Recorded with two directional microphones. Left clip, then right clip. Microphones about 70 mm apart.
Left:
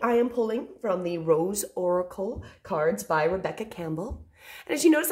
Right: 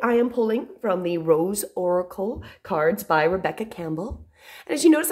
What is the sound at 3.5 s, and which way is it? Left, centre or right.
A woman's voice, right.